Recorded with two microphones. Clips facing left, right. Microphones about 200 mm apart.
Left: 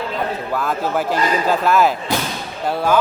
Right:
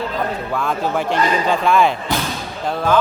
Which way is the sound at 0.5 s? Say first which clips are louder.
Even; 5° left (ahead or behind).